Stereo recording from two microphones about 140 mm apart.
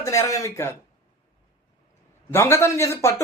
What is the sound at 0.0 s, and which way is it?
Speech, 25° left (ahead or behind).